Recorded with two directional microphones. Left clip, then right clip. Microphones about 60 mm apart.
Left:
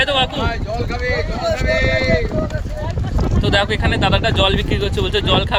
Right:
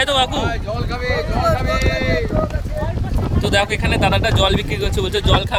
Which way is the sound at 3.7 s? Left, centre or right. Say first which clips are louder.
Even; right.